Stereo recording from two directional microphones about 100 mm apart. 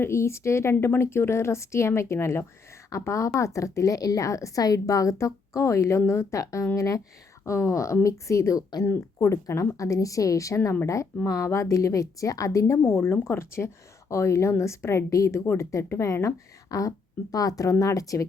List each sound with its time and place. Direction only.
0.0 s a woman's voice: 25° left (ahead or behind)